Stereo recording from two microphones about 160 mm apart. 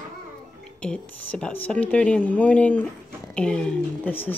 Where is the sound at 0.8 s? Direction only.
5° left (ahead or behind).